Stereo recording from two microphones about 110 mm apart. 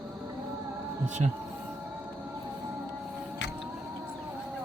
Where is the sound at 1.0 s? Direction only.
90° right.